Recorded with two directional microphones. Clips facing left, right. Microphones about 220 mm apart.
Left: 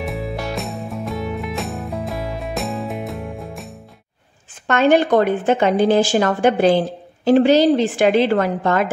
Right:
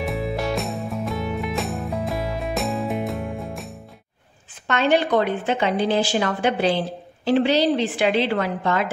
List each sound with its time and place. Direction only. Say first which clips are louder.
0.0 s music: right 1 dB; centre (ahead or behind)
4.6 s a woman's voice: left 5 dB; 45° left (ahead or behind)